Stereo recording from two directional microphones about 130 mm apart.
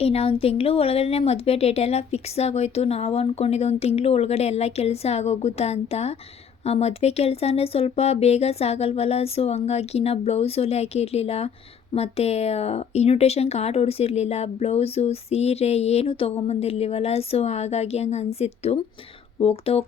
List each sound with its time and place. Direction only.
0.0 s speech: 50° left (ahead or behind)